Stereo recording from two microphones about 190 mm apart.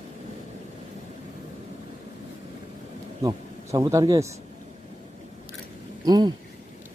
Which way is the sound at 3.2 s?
15° right (ahead or behind).